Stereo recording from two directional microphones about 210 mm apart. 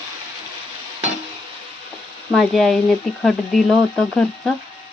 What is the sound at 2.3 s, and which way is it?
Speech, centre (ahead or behind).